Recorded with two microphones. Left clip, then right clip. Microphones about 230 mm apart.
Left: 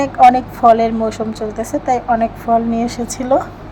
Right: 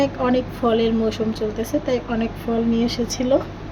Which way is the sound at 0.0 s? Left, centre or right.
Left.